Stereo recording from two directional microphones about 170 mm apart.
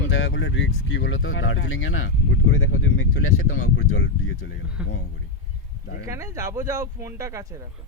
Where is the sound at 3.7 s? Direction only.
90° left.